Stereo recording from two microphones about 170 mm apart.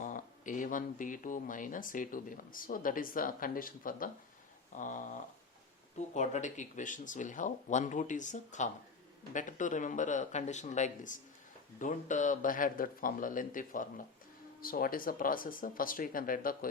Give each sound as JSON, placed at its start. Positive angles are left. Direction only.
{"t": 0.0, "sound": "speech", "side_deg": 50}
{"t": 6.1, "sound": "speech", "side_deg": 45}